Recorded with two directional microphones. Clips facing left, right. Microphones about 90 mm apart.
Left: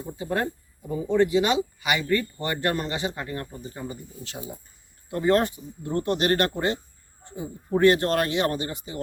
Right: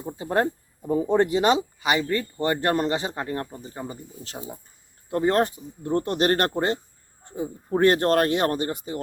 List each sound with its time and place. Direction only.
0.2 s speech: 35° right (ahead or behind)